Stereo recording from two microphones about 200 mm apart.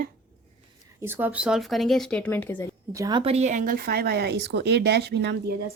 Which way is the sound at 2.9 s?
15° right (ahead or behind).